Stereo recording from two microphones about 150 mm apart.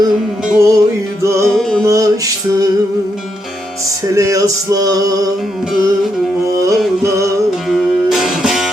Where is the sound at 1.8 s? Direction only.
20° right (ahead or behind).